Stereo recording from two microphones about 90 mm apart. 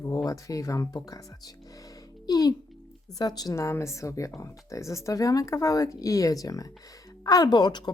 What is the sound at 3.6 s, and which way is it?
A woman's voice, 30° left (ahead or behind).